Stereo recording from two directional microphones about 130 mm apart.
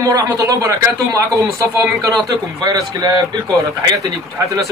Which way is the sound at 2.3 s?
30° right (ahead or behind).